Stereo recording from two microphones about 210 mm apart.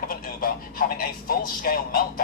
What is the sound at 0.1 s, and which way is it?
A man's voice, 45° left (ahead or behind).